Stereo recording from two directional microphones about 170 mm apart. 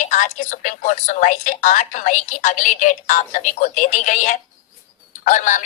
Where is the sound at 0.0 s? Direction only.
45° left (ahead or behind).